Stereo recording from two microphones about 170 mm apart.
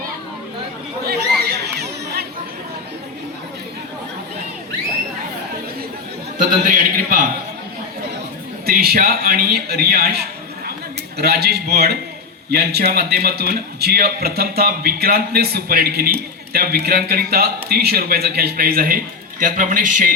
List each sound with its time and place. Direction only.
1.0 s chatter: 65° right (ahead or behind)
6.7 s a man's voice: 55° right (ahead or behind)
8.6 s a man's voice: 65° right (ahead or behind)